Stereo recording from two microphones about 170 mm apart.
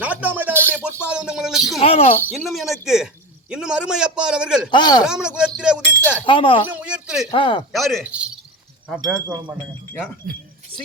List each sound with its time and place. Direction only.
0.0 s music: 10° right (ahead or behind)
1.0 s a man's voice: 5° right (ahead or behind)
1.8 s speech: 35° left (ahead or behind)
2.5 s a man's voice: centre (ahead or behind)
4.7 s speech: 25° left (ahead or behind)
5.0 s a man's voice: 5° right (ahead or behind)
5.5 s a sound: 5° right (ahead or behind)
6.2 s speech: 30° left (ahead or behind)
6.7 s a sound: 10° right (ahead or behind)
7.3 s speech: 30° left (ahead or behind)
7.7 s a man's voice: centre (ahead or behind)
9.2 s speech: 20° right (ahead or behind)
10.3 s speech: 60° right (ahead or behind)